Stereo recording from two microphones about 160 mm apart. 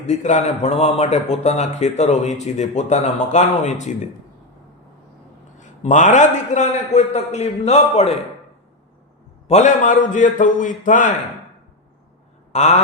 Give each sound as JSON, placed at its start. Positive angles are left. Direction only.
{"t": 0.0, "sound": "a man's voice", "side_deg": 45}
{"t": 5.5, "sound": "a man's voice", "side_deg": 50}
{"t": 9.5, "sound": "a man's voice", "side_deg": 50}
{"t": 12.5, "sound": "a man's voice", "side_deg": 45}